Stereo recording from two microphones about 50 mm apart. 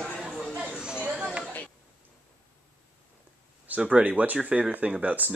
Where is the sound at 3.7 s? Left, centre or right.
Right.